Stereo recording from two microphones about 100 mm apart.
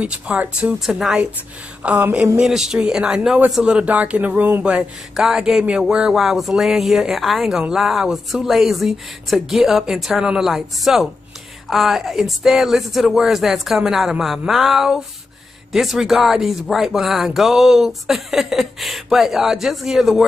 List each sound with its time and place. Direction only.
0.0 s speech: 10° right (ahead or behind)
1.8 s speech: 15° right (ahead or behind)
2.3 s speech: 5° right (ahead or behind)